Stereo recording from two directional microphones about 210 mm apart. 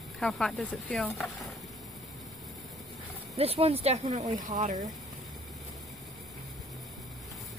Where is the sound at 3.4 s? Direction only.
30° right (ahead or behind).